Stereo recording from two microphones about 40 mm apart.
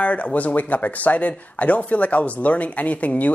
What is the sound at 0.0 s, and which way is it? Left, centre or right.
Speech, left.